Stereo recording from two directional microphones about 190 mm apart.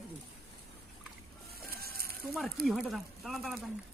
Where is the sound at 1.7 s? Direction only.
50° right (ahead or behind).